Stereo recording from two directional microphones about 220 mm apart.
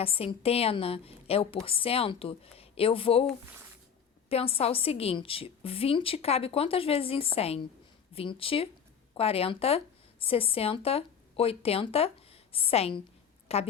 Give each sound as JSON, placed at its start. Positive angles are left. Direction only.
{"t": 0.0, "sound": "a woman's voice", "side_deg": 25}
{"t": 4.3, "sound": "a woman's voice", "side_deg": 25}